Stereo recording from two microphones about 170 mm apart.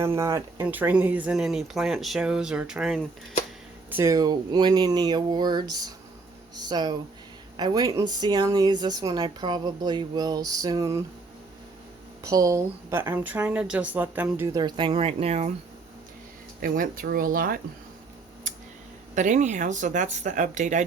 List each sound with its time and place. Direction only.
0.0 s speech: 15° right (ahead or behind)
3.8 s speech: 15° right (ahead or behind)
12.2 s speech: 20° right (ahead or behind); by 15.5 s 40° right (ahead or behind)
16.6 s speech: 55° right (ahead or behind)
18.5 s a sound: 50° right (ahead or behind)
19.1 s speech: 45° right (ahead or behind)